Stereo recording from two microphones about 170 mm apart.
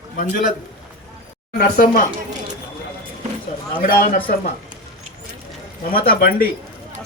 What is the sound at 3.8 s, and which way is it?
Speech, 55° left (ahead or behind).